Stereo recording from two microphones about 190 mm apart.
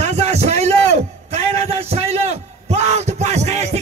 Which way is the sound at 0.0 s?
35° right (ahead or behind).